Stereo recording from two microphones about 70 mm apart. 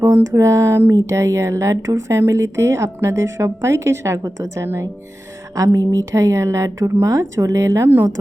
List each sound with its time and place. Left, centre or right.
0.0 s speech: right